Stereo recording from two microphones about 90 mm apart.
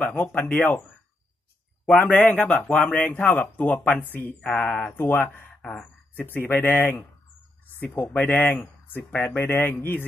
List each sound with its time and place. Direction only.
0.0 s speech: 15° left (ahead or behind)
2.0 s speech: 10° left (ahead or behind)
2.8 s speech: 15° left (ahead or behind)
5.6 s speech: 10° left (ahead or behind)
6.1 s speech: 20° left (ahead or behind)